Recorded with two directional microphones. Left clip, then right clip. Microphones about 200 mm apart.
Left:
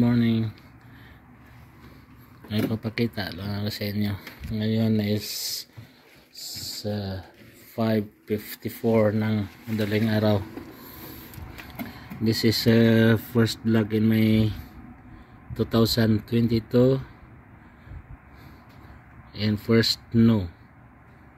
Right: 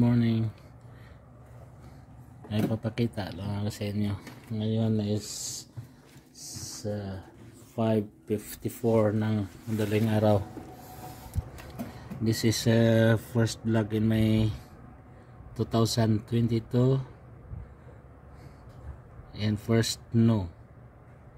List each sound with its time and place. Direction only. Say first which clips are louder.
0.0 s a sound: left 4 dB; 5° right (ahead or behind)
2.4 s speech: left 3 dB; 5° right (ahead or behind)
6.8 s speech: left 2 dB; 15° left (ahead or behind)
7.7 s speech: left 2 dB; centre (ahead or behind)
12.2 s speech: left 5 dB; 5° left (ahead or behind)
15.5 s speech: left 5 dB; 5° left (ahead or behind)
19.3 s speech: left 6 dB; 5° left (ahead or behind)